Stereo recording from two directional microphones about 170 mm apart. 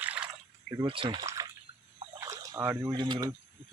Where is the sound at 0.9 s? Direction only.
30° right (ahead or behind).